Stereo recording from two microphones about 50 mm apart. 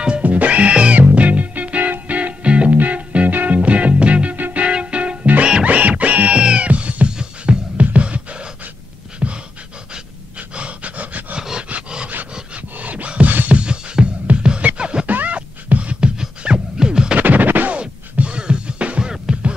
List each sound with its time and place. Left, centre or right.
0.2 s music: right
7.7 s beatboxing: right
9.2 s pant: centre
10.5 s pant: right
11.3 s dog: centre
12.7 s a sound: right
13.5 s music: right
15.0 s beatboxing: right
17.2 s scratch: right
17.7 s music: right